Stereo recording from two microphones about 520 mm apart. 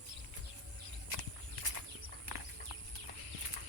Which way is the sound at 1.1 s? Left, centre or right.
Right.